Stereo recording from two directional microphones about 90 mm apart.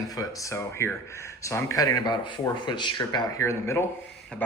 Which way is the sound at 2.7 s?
55° left (ahead or behind).